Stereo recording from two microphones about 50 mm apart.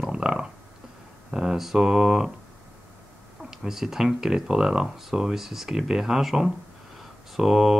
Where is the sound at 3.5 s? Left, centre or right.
Centre.